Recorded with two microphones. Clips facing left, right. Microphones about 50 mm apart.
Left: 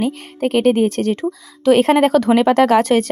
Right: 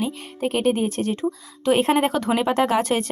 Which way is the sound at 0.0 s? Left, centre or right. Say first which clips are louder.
Left 6 dB; left.